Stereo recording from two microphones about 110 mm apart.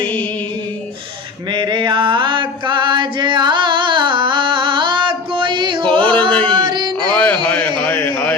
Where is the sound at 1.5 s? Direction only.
45° right (ahead or behind).